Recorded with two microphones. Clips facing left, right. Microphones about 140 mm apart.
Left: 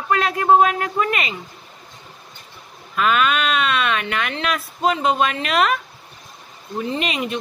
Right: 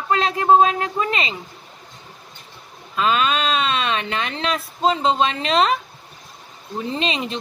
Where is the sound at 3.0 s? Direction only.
30° right (ahead or behind).